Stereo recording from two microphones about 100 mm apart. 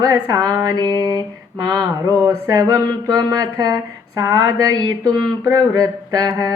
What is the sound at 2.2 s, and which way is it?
Speech, 35° right (ahead or behind).